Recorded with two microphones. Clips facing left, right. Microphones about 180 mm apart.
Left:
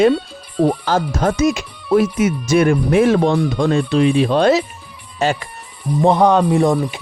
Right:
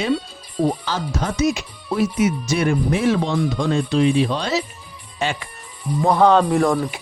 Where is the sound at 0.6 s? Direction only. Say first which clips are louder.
Left 5 dB; 55° left (ahead or behind).